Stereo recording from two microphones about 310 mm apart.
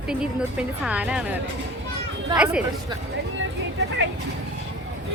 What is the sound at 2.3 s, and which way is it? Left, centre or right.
Speech, centre.